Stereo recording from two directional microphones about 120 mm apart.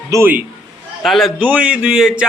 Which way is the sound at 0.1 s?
20° right (ahead or behind).